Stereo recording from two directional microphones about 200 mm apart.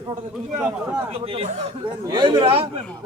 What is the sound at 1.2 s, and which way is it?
A man's voice, 30° right (ahead or behind).